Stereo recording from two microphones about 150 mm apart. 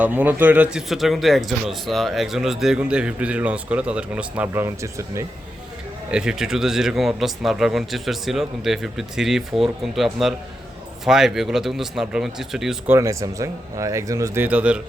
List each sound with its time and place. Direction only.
0.0 s speech: 10° right (ahead or behind)
6.1 s speech: 5° right (ahead or behind)
12.9 s speech: 20° right (ahead or behind)
14.4 s speech: 10° right (ahead or behind)